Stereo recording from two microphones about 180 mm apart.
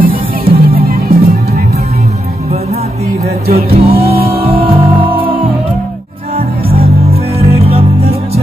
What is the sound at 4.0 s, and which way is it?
Music, 35° right (ahead or behind).